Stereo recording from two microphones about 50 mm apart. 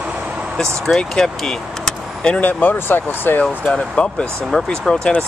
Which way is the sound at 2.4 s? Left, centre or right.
Left.